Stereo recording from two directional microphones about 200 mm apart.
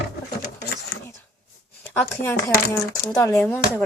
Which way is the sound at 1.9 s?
10° left (ahead or behind).